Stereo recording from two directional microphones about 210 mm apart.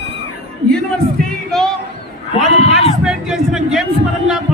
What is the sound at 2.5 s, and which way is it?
Run, 30° left (ahead or behind).